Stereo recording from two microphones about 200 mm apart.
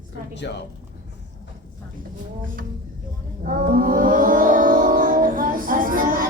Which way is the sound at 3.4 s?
45° right (ahead or behind).